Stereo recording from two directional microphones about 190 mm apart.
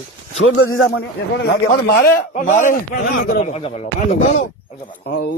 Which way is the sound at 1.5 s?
55° left (ahead or behind).